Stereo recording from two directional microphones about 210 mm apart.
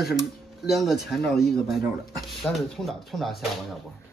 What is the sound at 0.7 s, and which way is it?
Speech, centre (ahead or behind).